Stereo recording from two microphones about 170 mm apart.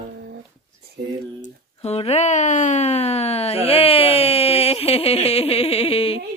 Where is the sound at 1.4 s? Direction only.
40° left (ahead or behind).